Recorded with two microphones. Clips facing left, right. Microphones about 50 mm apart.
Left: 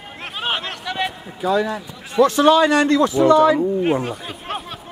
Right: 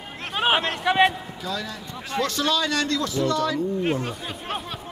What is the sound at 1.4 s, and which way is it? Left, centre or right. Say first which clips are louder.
A man's voice: left 13 dB; left.